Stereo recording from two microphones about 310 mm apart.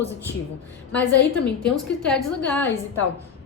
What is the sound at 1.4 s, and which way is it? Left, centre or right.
A woman's voice, centre.